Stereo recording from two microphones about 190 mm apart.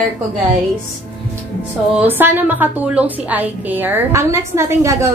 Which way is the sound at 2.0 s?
10° right (ahead or behind).